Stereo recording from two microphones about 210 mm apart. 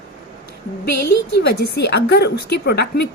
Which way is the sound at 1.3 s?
50° left (ahead or behind).